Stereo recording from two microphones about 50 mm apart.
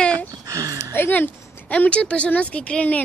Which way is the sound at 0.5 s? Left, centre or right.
Right.